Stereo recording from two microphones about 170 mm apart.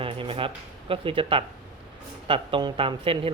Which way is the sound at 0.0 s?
30° right (ahead or behind).